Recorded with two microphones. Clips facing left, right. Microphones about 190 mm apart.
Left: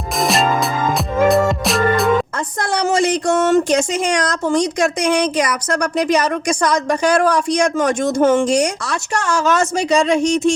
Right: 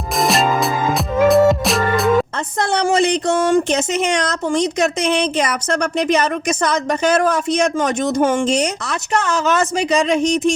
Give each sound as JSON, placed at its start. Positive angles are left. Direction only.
{"t": 0.2, "sound": "music", "side_deg": 0}
{"t": 2.6, "sound": "a sound", "side_deg": -25}
{"t": 3.5, "sound": "a woman's voice", "side_deg": -20}